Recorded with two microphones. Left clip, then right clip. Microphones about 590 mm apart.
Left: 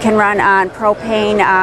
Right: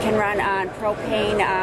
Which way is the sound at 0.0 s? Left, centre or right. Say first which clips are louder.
Left 9 dB; left.